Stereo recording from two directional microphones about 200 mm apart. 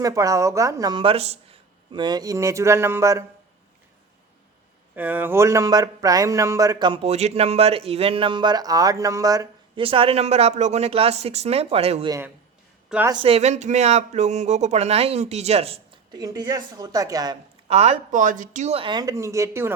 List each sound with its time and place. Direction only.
0.0 s speech: 15° right (ahead or behind)
4.9 s speech: 10° right (ahead or behind)
9.8 s speech: 25° right (ahead or behind)
12.9 s a woman's voice: 5° right (ahead or behind)
13.2 s speech: 30° right (ahead or behind)
16.2 s speech: 20° right (ahead or behind)
17.7 s speech: 30° right (ahead or behind); by 19.7 s 15° right (ahead or behind)